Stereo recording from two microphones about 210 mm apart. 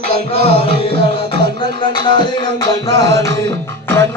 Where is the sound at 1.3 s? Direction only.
25° left (ahead or behind).